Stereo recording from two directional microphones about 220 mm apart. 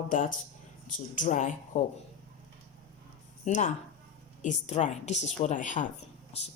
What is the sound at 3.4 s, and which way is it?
A woman's voice, 35° left (ahead or behind).